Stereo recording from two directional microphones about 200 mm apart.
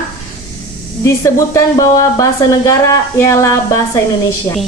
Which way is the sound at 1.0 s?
15° left (ahead or behind).